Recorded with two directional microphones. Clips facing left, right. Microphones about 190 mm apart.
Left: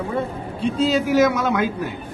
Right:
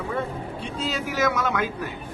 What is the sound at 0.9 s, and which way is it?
Speech, 30° left (ahead or behind).